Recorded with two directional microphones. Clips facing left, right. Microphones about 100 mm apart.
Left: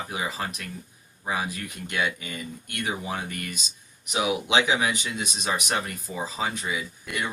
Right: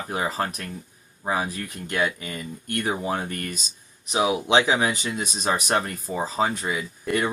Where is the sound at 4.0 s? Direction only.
30° right (ahead or behind).